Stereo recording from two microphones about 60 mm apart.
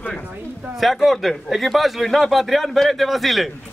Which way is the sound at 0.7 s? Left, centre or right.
Centre.